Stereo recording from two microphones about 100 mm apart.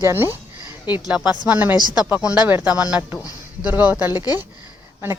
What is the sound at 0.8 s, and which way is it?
Speech, 45° left (ahead or behind).